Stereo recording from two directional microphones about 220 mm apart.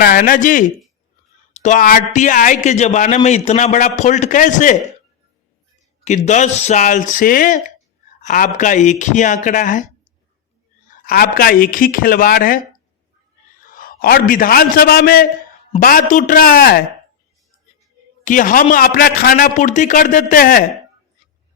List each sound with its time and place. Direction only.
0.0 s a man's voice: 40° left (ahead or behind)
6.1 s a man's voice: 35° left (ahead or behind)
10.9 s a man's voice: 40° left (ahead or behind)
13.7 s a man's voice: 40° left (ahead or behind)
18.3 s a man's voice: 40° left (ahead or behind)